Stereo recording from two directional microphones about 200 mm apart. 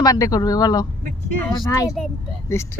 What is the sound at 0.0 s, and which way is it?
Speech, 20° left (ahead or behind).